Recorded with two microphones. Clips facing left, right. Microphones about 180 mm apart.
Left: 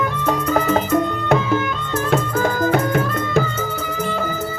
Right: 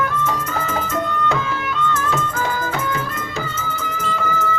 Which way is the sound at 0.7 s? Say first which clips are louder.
Left 5 dB; 65° left (ahead or behind).